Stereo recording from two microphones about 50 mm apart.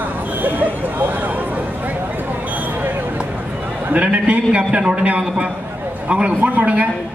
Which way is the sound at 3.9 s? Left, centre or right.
Right.